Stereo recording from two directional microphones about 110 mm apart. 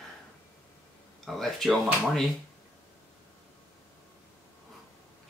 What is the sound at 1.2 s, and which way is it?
Speech, centre (ahead or behind).